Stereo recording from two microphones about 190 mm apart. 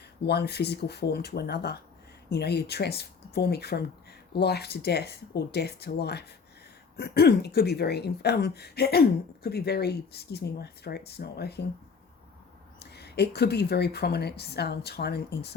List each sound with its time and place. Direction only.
0.3 s speech: 60° left (ahead or behind)
12.8 s speech: 60° left (ahead or behind)